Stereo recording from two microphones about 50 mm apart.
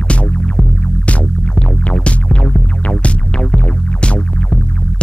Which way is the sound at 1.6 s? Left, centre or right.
Left.